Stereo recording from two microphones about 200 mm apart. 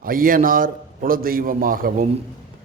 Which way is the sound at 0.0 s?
45° right (ahead or behind).